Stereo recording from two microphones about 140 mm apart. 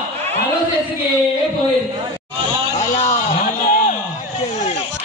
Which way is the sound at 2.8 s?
55° left (ahead or behind).